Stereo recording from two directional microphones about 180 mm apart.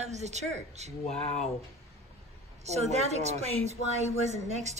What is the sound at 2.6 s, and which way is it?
A woman's voice, 40° right (ahead or behind).